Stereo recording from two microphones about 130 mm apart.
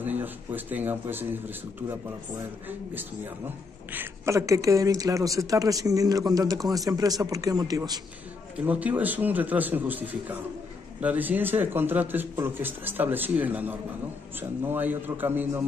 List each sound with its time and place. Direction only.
0.0 s speech: 15° right (ahead or behind)
2.9 s speech: 15° right (ahead or behind); by 8.0 s 30° right (ahead or behind)
8.5 s a man's voice: 10° right (ahead or behind)